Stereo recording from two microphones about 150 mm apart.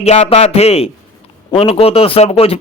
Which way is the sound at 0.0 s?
45° left (ahead or behind).